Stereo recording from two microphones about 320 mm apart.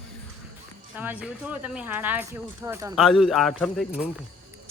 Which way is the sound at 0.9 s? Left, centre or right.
Centre.